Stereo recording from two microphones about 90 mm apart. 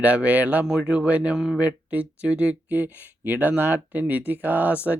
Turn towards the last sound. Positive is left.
turn(degrees=-15)  # may be behind; listen again after turning